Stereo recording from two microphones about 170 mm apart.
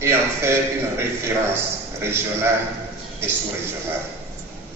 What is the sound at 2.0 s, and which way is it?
Speech, 15° right (ahead or behind).